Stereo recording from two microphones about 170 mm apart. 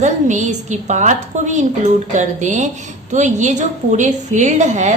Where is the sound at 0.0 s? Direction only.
45° right (ahead or behind).